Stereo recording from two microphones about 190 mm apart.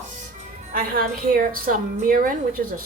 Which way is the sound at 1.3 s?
50° right (ahead or behind).